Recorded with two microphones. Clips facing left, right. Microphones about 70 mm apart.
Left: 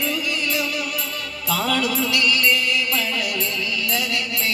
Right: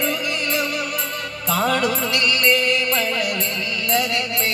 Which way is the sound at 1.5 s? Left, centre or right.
Right.